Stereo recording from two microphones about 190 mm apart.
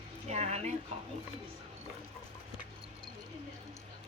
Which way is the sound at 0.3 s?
35° right (ahead or behind).